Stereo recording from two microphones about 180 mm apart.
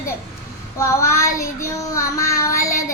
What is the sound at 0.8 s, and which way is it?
Child singing, 15° left (ahead or behind).